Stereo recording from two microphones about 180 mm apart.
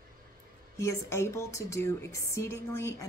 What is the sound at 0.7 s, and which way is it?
A woman's voice, 15° left (ahead or behind).